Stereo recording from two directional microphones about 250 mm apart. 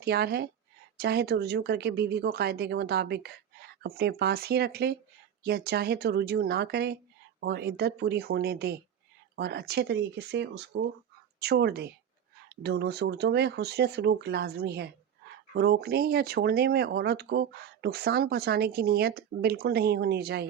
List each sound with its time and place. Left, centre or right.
0.0 s speech: right